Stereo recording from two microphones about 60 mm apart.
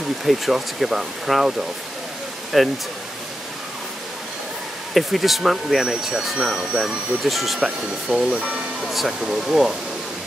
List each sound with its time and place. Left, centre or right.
0.2 s speech: centre
2.5 s speech: centre
4.9 s speech: centre
6.8 s speech: centre
8.1 s speech: centre
8.8 s speech: centre